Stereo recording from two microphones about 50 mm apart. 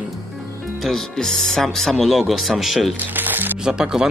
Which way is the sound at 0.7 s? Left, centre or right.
Centre.